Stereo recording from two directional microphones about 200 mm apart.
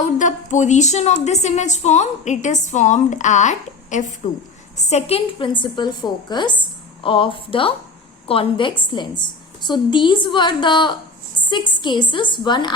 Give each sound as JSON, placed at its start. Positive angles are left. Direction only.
{"t": 0.0, "sound": "a woman's voice", "side_deg": 40}